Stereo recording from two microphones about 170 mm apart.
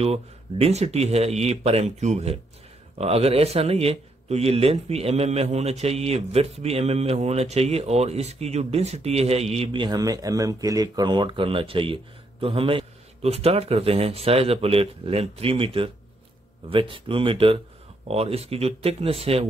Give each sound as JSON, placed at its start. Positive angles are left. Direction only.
{"t": 0.0, "sound": "a man's voice", "side_deg": -35}